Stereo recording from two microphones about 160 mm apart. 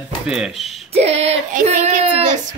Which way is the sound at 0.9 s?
40° right (ahead or behind).